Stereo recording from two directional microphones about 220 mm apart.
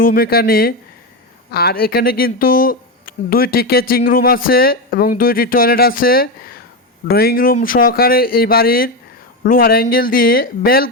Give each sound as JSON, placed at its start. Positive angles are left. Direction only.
{"t": 0.0, "sound": "speech", "side_deg": 40}